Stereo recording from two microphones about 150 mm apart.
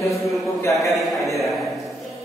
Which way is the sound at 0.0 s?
20° left (ahead or behind).